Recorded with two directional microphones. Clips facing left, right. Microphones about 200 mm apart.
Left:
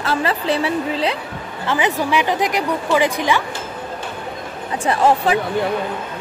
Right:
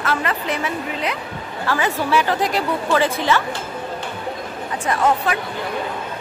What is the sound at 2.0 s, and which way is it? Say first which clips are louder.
A woman's voice: left 1 dB; 15° left (ahead or behind).